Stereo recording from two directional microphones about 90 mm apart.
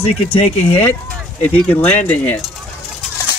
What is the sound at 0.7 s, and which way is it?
Speech, 20° left (ahead or behind).